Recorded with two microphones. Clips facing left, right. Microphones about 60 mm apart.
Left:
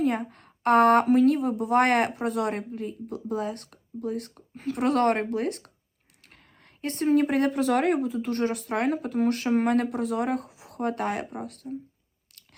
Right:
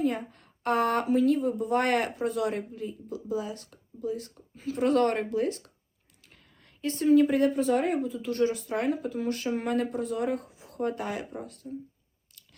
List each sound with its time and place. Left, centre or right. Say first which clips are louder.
0.0 s a woman's voice: left 3 dB; left
12.3 s scissors: left 1 dB; left